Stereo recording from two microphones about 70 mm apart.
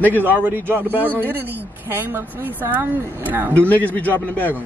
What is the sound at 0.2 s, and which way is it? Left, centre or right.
A woman's voice, right.